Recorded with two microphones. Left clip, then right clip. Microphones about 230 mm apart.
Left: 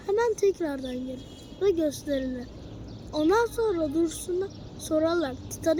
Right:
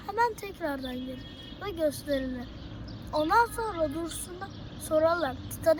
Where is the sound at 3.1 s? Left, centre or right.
Right.